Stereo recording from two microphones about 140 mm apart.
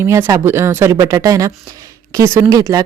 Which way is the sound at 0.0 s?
20° right (ahead or behind).